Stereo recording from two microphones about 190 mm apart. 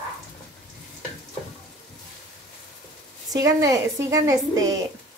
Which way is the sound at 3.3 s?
15° right (ahead or behind).